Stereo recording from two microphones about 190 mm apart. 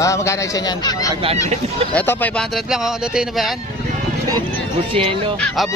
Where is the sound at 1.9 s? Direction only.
10° left (ahead or behind).